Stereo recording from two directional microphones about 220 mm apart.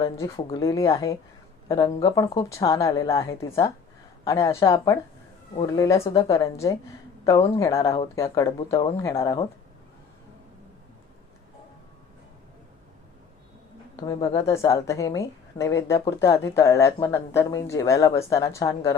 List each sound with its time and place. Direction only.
0.0 s a woman's voice: 15° left (ahead or behind)
14.0 s a woman's voice: 15° left (ahead or behind)